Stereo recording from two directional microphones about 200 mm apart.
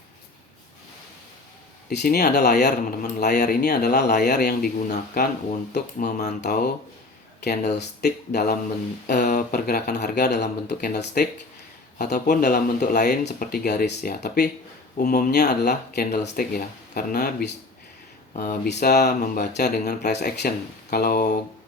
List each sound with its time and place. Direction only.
1.9 s speech: 55° left (ahead or behind)
4.9 s speech: 45° left (ahead or behind)
6.1 s speech: 55° left (ahead or behind)